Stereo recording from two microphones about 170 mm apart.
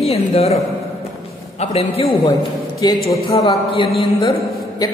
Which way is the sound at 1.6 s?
40° left (ahead or behind).